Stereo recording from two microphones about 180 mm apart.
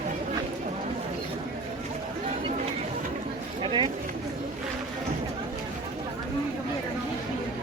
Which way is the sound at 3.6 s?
25° right (ahead or behind).